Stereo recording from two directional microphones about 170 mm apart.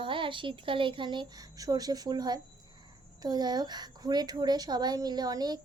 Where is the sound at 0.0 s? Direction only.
30° right (ahead or behind).